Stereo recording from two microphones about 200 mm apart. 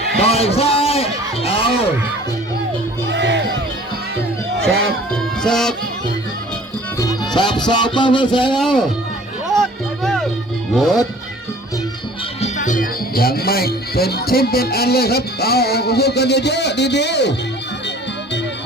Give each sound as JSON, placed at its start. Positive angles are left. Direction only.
{"t": 0.2, "sound": "a sound", "side_deg": 30}
{"t": 3.1, "sound": "music", "side_deg": -60}
{"t": 5.1, "sound": "music", "side_deg": 5}
{"t": 7.0, "sound": "music", "side_deg": 20}
{"t": 8.5, "sound": "speech", "side_deg": 0}
{"t": 9.5, "sound": "music", "side_deg": 0}
{"t": 12.4, "sound": "speech", "side_deg": 40}